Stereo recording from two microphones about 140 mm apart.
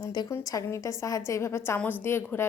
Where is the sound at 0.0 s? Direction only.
25° left (ahead or behind).